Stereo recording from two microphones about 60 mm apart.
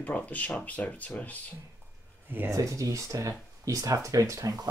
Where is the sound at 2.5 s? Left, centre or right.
Right.